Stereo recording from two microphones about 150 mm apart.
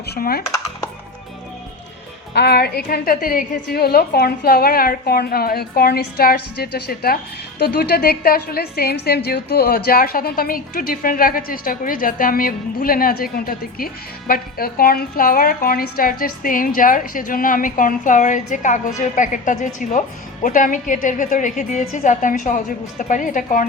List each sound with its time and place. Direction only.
0.0 s a woman's voice: 90° left
2.4 s a woman's voice: 90° left; by 23.6 s 60° left (ahead or behind)